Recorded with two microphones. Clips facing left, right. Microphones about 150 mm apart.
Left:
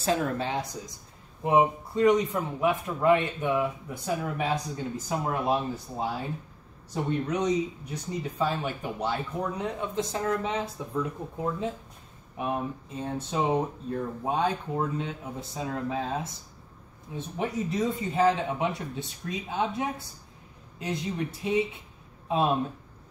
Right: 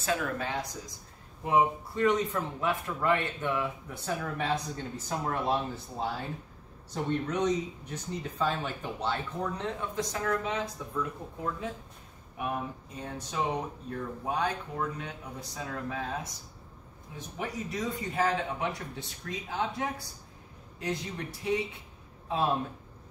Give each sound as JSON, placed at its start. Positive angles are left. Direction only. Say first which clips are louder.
{"t": 0.0, "sound": "speech", "louder": "left 4 dB", "side_deg": 30}
{"t": 1.4, "sound": "a man's voice", "louder": "left 3 dB", "side_deg": 20}
{"t": 9.9, "sound": "speech", "louder": "left 3 dB", "side_deg": 25}
{"t": 13.0, "sound": "speech", "louder": "left 4 dB", "side_deg": 25}